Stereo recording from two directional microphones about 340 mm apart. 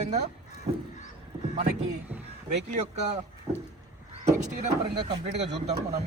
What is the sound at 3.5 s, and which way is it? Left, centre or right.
Speech, centre.